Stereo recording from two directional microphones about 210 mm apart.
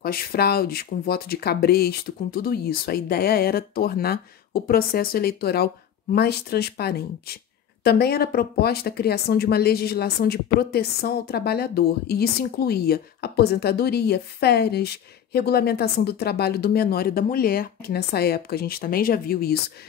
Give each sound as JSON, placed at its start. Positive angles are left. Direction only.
{"t": 0.0, "sound": "speech", "side_deg": 45}